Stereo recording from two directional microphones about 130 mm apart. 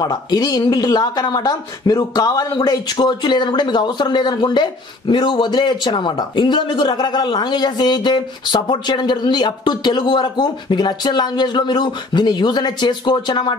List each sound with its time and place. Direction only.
0.0 s speech: 30° left (ahead or behind)